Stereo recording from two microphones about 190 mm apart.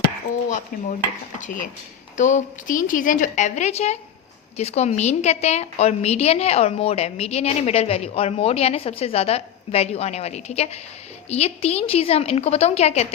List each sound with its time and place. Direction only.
1.4 s a woman's voice: 45° left (ahead or behind)